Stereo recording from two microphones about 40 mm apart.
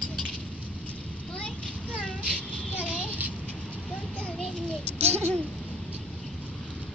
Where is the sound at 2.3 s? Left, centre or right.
Left.